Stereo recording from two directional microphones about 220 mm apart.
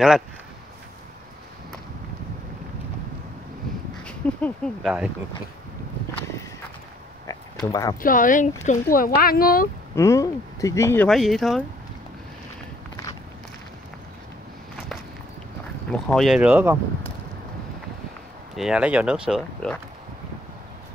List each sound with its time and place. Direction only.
4.0 s speech: 5° left (ahead or behind)
7.6 s speech: 15° left (ahead or behind)
8.0 s a woman's voice: 40° left (ahead or behind)
9.9 s speech: 15° left (ahead or behind)
15.9 s speech: 5° left (ahead or behind)
18.6 s speech: 5° right (ahead or behind)